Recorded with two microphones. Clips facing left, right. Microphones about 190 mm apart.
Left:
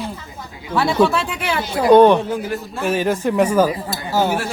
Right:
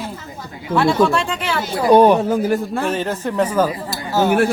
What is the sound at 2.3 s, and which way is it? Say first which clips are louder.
Speech: right 6 dB; 45° right (ahead or behind).